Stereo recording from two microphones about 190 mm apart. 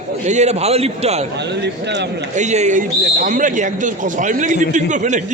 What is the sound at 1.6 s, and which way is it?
Speech, 65° right (ahead or behind).